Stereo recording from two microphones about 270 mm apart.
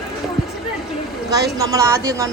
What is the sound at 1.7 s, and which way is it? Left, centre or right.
Speech, centre.